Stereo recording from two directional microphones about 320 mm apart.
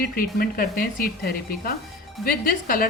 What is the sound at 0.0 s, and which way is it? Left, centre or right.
Speech, left.